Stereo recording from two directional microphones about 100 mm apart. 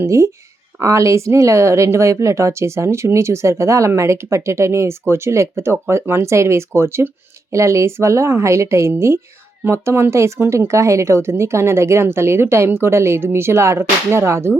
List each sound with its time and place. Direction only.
0.0 s speech: 30° right (ahead or behind)